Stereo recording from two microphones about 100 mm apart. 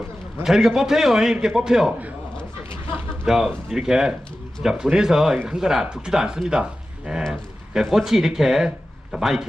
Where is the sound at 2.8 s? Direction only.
20° right (ahead or behind).